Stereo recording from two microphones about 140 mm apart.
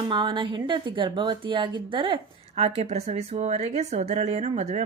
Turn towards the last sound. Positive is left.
turn(degrees=-55)  # may be behind; listen again after turning